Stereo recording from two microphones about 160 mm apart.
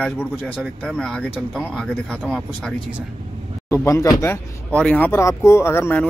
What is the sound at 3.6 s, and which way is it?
A man's voice, 20° left (ahead or behind).